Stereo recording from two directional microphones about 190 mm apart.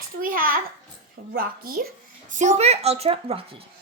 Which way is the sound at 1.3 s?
50° right (ahead or behind).